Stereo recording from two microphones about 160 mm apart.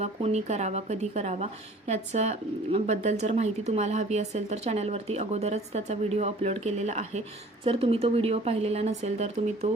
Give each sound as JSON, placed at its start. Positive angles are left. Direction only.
{"t": 0.0, "sound": "speech", "side_deg": -40}